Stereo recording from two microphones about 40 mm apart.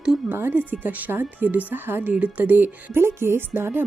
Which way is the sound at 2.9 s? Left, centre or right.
Right.